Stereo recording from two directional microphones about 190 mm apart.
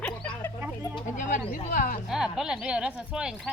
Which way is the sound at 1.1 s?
40° left (ahead or behind).